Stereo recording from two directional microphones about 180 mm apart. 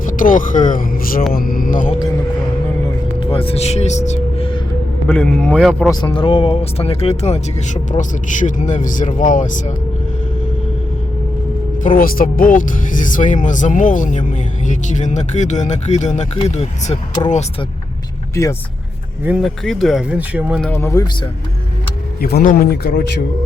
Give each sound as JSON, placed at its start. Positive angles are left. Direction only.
{"t": 0.0, "sound": "speech", "side_deg": 50}
{"t": 3.2, "sound": "speech", "side_deg": 30}
{"t": 5.0, "sound": "speech", "side_deg": 5}
{"t": 6.1, "sound": "speech", "side_deg": 30}
{"t": 11.9, "sound": "speech", "side_deg": 50}
{"t": 18.4, "sound": "speech", "side_deg": 15}
{"t": 19.2, "sound": "speech", "side_deg": -5}
{"t": 20.6, "sound": "speech", "side_deg": 10}
{"t": 22.2, "sound": "speech", "side_deg": 55}